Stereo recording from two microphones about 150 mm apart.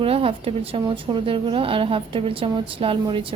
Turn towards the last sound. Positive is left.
turn(degrees=-35)  # may be behind; listen again after turning